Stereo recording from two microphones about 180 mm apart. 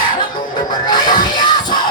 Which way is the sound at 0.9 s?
25° left (ahead or behind).